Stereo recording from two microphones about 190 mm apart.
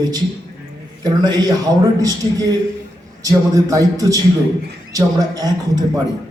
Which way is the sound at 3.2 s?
20° right (ahead or behind).